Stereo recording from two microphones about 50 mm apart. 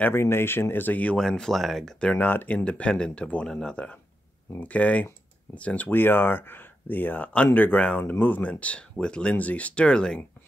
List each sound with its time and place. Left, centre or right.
0.1 s speech: left
1.1 s speech: centre
2.1 s speech: left
2.5 s speech: left
3.7 s speech: left
5.9 s speech: left
8.1 s speech: left
8.4 s speech: left